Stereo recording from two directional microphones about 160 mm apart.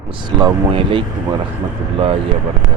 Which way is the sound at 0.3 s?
30° right (ahead or behind).